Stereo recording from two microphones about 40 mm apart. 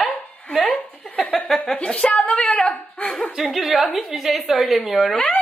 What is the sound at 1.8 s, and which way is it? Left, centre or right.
Speech, left.